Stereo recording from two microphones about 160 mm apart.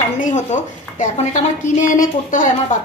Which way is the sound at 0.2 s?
50° left (ahead or behind).